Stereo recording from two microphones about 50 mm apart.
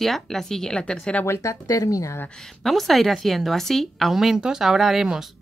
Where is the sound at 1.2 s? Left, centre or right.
Left.